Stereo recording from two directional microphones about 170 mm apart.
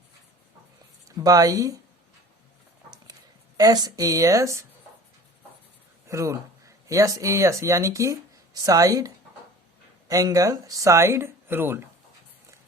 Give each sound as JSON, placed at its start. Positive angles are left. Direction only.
{"t": 1.0, "sound": "speech", "side_deg": -20}
{"t": 3.6, "sound": "speech", "side_deg": -20}
{"t": 6.1, "sound": "speech", "side_deg": -20}